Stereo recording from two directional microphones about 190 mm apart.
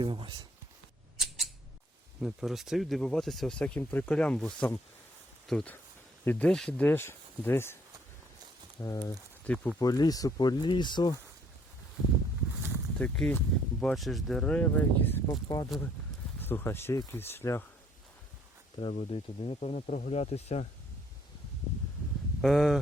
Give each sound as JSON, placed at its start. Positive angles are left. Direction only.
{"t": 0.0, "sound": "speech", "side_deg": -25}
{"t": 1.1, "sound": "a sound", "side_deg": 0}
{"t": 2.2, "sound": "speech", "side_deg": 0}
{"t": 8.8, "sound": "speech", "side_deg": 15}
{"t": 9.5, "sound": "speech", "side_deg": 5}
{"t": 9.8, "sound": "speech", "side_deg": 20}
{"t": 13.0, "sound": "speech", "side_deg": 5}
{"t": 18.8, "sound": "speech", "side_deg": 30}
{"t": 22.4, "sound": "speech", "side_deg": 0}